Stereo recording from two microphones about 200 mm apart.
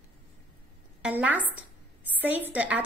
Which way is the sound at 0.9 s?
5° right (ahead or behind).